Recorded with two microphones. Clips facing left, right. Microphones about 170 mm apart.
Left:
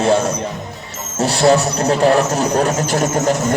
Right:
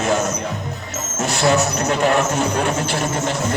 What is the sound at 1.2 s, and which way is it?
Speech, 35° left (ahead or behind).